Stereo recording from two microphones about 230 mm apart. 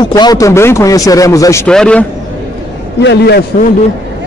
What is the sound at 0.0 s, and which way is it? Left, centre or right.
A man's voice, centre.